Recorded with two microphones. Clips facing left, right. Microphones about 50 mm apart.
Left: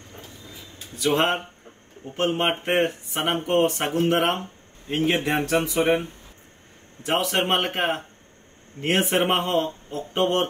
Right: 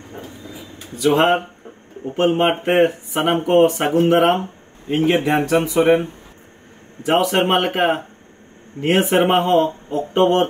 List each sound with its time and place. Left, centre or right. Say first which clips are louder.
1.0 s speech: right 7 dB; centre
5.8 s speech: right 8 dB; right
7.1 s speech: right 6 dB; centre
9.6 s speech: right 8 dB; centre